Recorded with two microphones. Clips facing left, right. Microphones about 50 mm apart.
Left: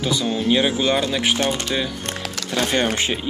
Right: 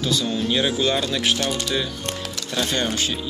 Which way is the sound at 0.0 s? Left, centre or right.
Left.